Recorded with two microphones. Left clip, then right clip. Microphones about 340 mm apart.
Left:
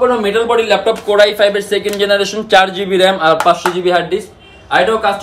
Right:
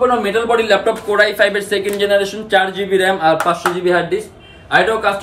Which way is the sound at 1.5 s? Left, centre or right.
Left.